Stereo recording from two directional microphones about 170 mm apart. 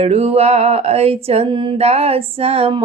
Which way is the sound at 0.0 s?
35° right (ahead or behind).